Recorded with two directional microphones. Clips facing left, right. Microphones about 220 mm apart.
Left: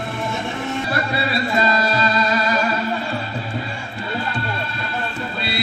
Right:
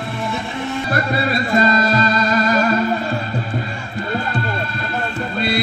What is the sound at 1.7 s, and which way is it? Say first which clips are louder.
Music: right 3 dB; 45° right (ahead or behind).